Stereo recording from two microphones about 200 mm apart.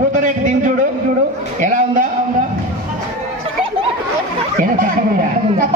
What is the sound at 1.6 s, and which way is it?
Speech, 40° right (ahead or behind).